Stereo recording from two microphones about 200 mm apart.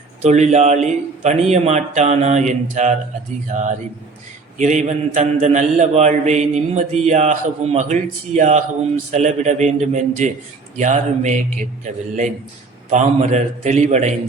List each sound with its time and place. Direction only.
0.2 s a man's voice: 35° right (ahead or behind)
12.9 s a man's voice: 35° right (ahead or behind)